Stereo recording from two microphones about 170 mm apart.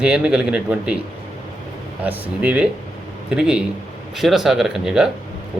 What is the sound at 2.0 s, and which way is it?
A man's voice, 10° right (ahead or behind).